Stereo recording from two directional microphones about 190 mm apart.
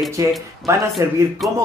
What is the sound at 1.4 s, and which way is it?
Speech, centre (ahead or behind).